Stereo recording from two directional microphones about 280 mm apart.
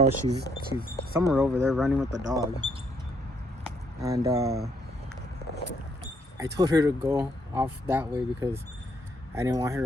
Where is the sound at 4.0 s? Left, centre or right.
Centre.